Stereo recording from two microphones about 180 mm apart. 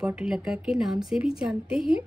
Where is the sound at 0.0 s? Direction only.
5° right (ahead or behind).